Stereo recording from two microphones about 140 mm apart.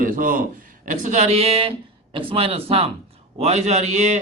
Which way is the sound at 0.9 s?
60° right (ahead or behind).